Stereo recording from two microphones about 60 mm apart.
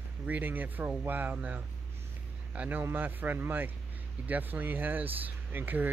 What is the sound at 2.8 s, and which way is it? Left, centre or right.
Speech, right.